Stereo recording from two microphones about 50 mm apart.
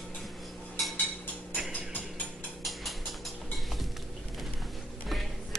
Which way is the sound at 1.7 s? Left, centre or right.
Left.